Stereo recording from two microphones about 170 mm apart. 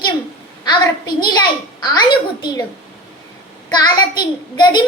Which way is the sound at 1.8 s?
25° left (ahead or behind).